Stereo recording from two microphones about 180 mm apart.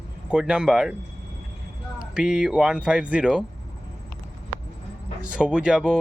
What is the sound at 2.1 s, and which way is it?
Speech, 5° right (ahead or behind).